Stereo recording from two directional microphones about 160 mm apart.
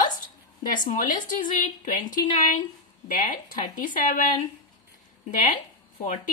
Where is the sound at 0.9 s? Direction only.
55° left (ahead or behind).